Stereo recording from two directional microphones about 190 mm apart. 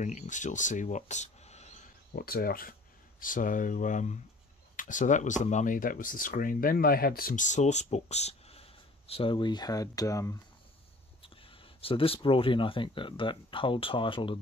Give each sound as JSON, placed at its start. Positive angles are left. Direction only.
{"t": 0.0, "sound": "speech", "side_deg": 40}
{"t": 2.1, "sound": "speech", "side_deg": 50}
{"t": 11.8, "sound": "speech", "side_deg": 30}